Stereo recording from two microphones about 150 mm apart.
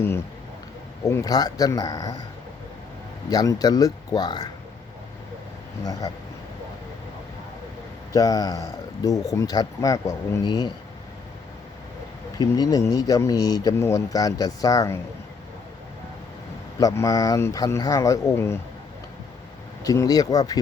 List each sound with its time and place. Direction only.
1.0 s speech: 25° left (ahead or behind)
3.2 s speech: 25° left (ahead or behind)
5.8 s speech: 25° left (ahead or behind)
8.1 s speech: 25° left (ahead or behind)
12.4 s speech: 25° left (ahead or behind)
16.8 s speech: 20° left (ahead or behind)
19.8 s speech: 25° left (ahead or behind)